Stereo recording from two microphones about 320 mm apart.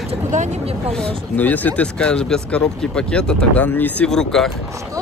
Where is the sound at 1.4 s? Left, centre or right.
Centre.